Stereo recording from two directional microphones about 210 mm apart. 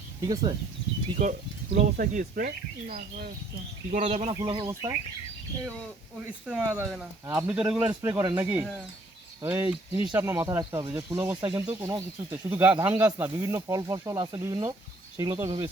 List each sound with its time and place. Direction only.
1.2 s speech: 35° right (ahead or behind)
4.4 s speech: 20° right (ahead or behind)
6.2 s speech: 5° right (ahead or behind)
9.4 s speech: 10° right (ahead or behind)
15.4 s speech: 25° right (ahead or behind)